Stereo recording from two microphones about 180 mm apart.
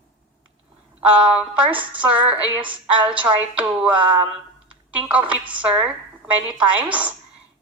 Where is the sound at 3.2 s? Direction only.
5° right (ahead or behind).